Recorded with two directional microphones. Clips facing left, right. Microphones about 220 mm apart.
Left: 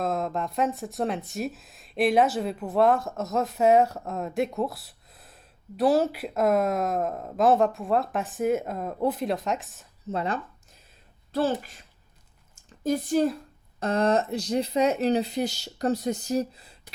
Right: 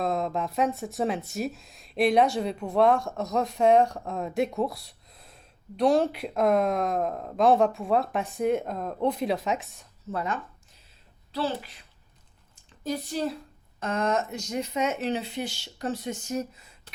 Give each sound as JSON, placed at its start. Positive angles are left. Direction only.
{"t": 0.0, "sound": "speech", "side_deg": 0}
{"t": 10.1, "sound": "speech", "side_deg": 20}
{"t": 11.3, "sound": "a woman's voice", "side_deg": 45}
{"t": 12.5, "sound": "a sound", "side_deg": 45}
{"t": 13.7, "sound": "speech", "side_deg": 35}